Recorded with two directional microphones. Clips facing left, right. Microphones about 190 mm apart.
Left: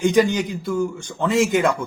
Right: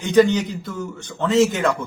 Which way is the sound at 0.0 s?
10° left (ahead or behind).